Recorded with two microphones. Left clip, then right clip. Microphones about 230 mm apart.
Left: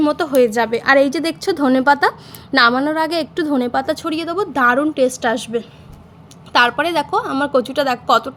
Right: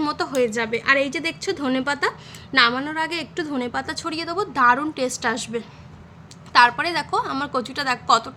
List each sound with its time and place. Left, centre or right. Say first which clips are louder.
0.0 s a woman's voice: left 7 dB; centre